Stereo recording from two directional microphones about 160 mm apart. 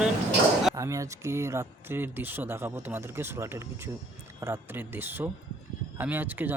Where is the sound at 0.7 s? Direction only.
20° right (ahead or behind).